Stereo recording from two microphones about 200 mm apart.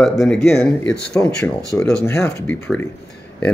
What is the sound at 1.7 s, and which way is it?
Speech, 15° left (ahead or behind).